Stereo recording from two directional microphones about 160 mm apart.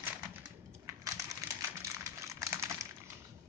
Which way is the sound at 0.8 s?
20° right (ahead or behind).